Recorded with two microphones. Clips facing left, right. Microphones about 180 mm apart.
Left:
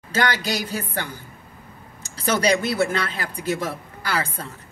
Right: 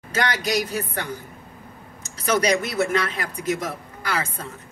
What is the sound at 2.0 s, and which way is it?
A woman's voice, 30° left (ahead or behind).